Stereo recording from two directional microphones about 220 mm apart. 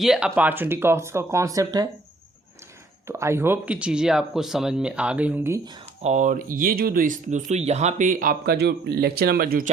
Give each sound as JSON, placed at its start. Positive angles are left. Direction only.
{"t": 0.0, "sound": "speech", "side_deg": 0}
{"t": 3.1, "sound": "speech", "side_deg": -10}
{"t": 6.1, "sound": "speech", "side_deg": -35}